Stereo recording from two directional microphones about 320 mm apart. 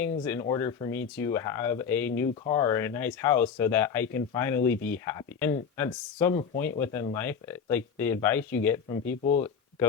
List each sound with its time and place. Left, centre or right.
0.0 s speech: centre
8.9 s speech: left